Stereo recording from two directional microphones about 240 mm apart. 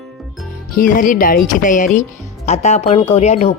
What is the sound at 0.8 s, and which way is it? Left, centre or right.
Speech, left.